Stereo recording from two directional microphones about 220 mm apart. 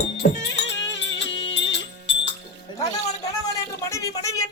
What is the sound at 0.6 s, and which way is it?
Music, 55° left (ahead or behind).